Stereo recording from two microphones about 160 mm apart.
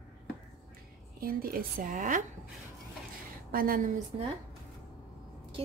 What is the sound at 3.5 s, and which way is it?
Speech, 65° right (ahead or behind).